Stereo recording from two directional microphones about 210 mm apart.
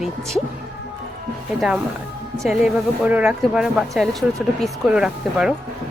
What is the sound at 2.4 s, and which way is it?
Speech, 5° right (ahead or behind).